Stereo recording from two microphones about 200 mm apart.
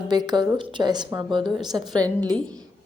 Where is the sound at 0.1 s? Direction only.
20° right (ahead or behind).